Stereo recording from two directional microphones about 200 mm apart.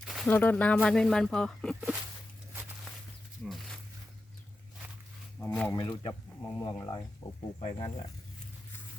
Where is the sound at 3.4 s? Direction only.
Centre (ahead or behind).